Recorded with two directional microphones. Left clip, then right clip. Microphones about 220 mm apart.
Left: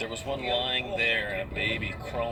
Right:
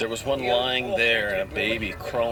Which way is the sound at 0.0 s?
25° right (ahead or behind).